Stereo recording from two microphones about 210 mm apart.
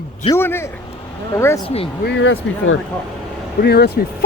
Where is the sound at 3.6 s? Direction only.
50° left (ahead or behind).